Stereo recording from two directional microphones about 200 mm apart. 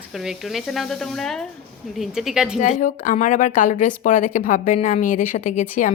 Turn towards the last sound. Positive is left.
turn(degrees=40)  # may be behind; listen again after turning